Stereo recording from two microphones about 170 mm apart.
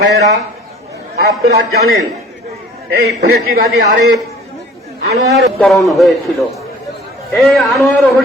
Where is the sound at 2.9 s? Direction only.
70° right (ahead or behind).